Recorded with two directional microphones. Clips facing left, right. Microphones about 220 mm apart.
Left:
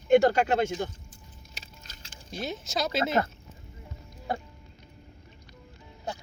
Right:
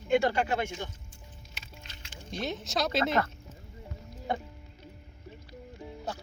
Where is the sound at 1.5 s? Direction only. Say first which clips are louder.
Right 1 dB; 40° left (ahead or behind).